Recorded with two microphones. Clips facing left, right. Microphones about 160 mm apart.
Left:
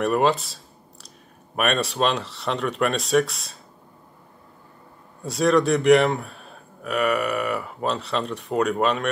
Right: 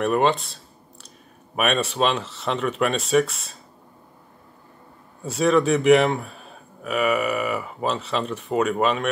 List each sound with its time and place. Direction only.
0.0 s speech: centre (ahead or behind)
1.6 s speech: centre (ahead or behind)
5.2 s speech: centre (ahead or behind)